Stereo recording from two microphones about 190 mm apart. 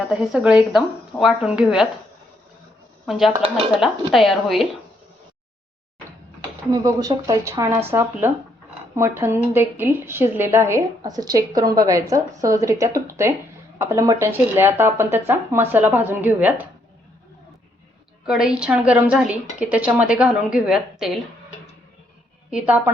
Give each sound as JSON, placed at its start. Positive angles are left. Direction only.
{"t": 0.1, "sound": "a woman's voice", "side_deg": -5}
{"t": 3.1, "sound": "a woman's voice", "side_deg": 0}
{"t": 6.7, "sound": "a woman's voice", "side_deg": -20}
{"t": 18.3, "sound": "a woman's voice", "side_deg": -5}
{"t": 22.4, "sound": "a woman's voice", "side_deg": -5}